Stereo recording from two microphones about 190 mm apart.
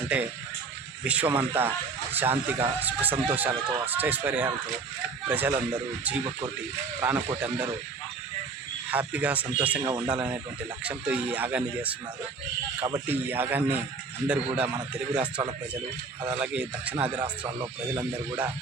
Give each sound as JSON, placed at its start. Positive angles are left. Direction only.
{"t": 1.0, "sound": "speech", "side_deg": -5}
{"t": 8.9, "sound": "speech", "side_deg": -10}
{"t": 9.8, "sound": "speech", "side_deg": -20}
{"t": 10.1, "sound": "a man's voice", "side_deg": -5}
{"t": 16.3, "sound": "speech", "side_deg": -5}